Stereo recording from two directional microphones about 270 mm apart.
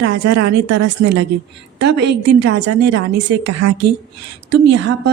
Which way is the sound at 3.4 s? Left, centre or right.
Right.